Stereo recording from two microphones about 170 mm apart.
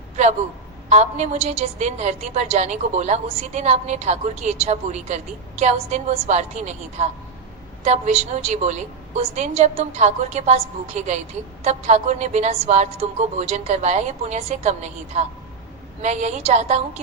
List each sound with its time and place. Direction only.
0.9 s a woman's voice: 40° right (ahead or behind)